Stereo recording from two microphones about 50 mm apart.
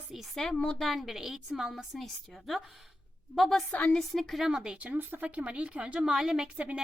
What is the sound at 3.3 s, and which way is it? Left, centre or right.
Speech, centre.